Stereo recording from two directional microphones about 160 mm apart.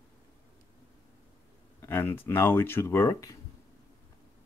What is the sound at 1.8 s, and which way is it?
Speech, 15° left (ahead or behind).